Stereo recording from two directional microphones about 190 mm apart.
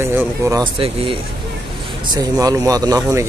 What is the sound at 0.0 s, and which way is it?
Speech, 10° right (ahead or behind).